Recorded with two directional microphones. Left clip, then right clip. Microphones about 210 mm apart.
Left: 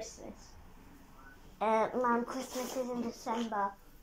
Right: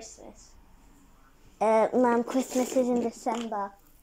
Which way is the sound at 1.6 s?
35° right (ahead or behind).